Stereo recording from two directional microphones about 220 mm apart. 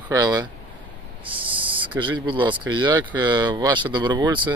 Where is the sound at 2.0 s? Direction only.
20° right (ahead or behind).